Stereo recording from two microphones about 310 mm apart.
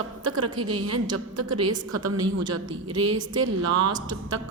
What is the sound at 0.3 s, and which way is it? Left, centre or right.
A woman's voice, right.